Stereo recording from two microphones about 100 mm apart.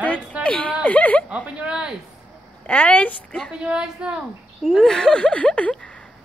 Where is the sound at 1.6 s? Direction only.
10° right (ahead or behind).